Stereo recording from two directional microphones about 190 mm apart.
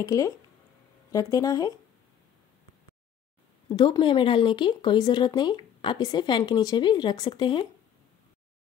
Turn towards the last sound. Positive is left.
turn(degrees=25)  # may be behind; listen again after turning